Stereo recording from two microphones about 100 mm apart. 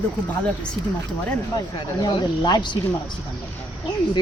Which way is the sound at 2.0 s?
50° left (ahead or behind).